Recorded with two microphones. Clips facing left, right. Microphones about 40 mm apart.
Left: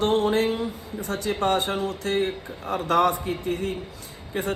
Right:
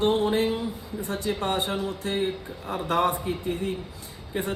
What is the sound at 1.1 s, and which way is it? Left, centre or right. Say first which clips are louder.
A man's voice: left 4 dB; left.